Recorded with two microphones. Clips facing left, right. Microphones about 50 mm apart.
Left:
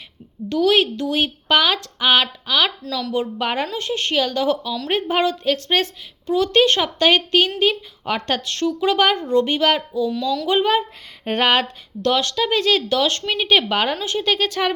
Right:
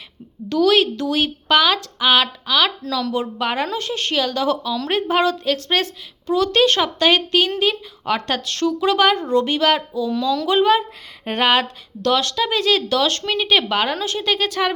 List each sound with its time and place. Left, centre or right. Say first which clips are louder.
0.4 s speech: right 1 dB; left
2.2 s speech: right 1 dB; left